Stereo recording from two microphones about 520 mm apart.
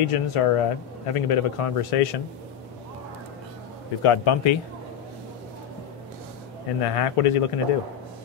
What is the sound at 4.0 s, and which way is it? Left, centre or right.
Speech, left.